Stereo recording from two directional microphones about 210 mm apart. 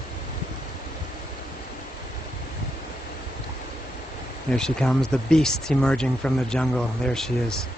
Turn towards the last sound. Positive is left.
turn(degrees=5)  # may be behind; listen again after turning